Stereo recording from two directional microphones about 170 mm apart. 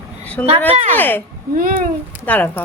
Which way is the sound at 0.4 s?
10° left (ahead or behind).